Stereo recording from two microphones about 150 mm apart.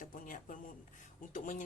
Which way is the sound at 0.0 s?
65° left (ahead or behind).